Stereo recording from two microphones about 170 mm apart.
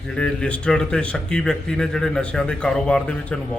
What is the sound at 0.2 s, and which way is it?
Speech, 5° left (ahead or behind).